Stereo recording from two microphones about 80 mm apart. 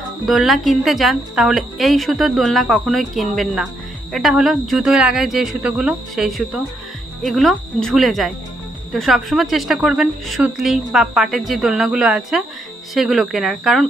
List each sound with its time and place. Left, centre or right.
0.3 s a woman's voice: centre